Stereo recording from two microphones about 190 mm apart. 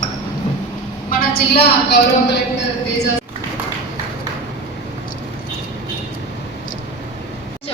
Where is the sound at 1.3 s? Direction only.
55° left (ahead or behind).